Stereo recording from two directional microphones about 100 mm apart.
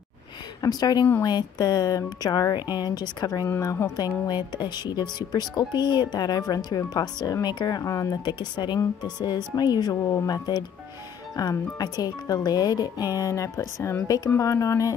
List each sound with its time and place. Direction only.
0.6 s speech: 40° left (ahead or behind)
3.4 s speech: 30° left (ahead or behind)
8.3 s speech: 50° left (ahead or behind)
11.8 s speech: 40° left (ahead or behind)